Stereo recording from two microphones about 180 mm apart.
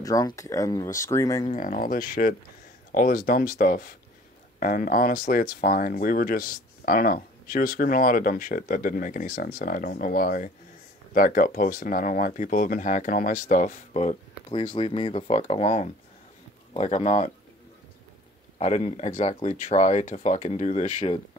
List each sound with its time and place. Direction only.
0.0 s speech: 20° left (ahead or behind)
1.5 s speech: 45° left (ahead or behind)
18.6 s speech: 40° left (ahead or behind)